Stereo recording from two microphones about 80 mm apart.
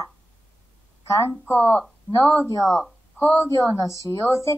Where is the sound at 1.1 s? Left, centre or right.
Left.